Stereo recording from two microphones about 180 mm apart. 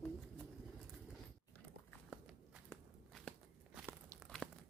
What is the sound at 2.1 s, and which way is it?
Walk, 5° right (ahead or behind).